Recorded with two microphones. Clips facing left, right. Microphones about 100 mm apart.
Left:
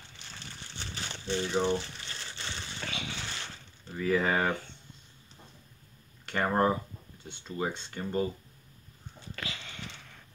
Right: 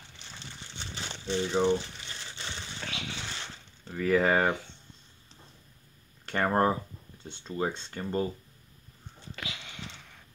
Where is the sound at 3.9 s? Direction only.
50° right (ahead or behind).